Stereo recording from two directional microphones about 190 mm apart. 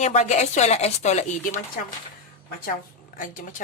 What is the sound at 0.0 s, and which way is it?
Speech, 35° left (ahead or behind).